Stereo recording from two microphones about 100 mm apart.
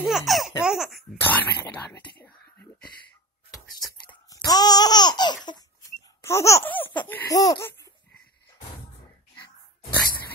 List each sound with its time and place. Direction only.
0.0 s speech: centre (ahead or behind)
1.2 s speech: 15° left (ahead or behind)
2.0 s whispering: 20° left (ahead or behind)
3.8 s a sound: centre (ahead or behind)
4.3 s laughter: 40° left (ahead or behind)
6.2 s speech: 30° left (ahead or behind)
6.6 s speech: 20° left (ahead or behind)
7.2 s speech: 35° left (ahead or behind)